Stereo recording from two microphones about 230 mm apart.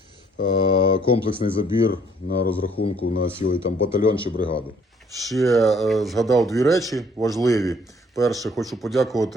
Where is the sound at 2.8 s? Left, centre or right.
Left.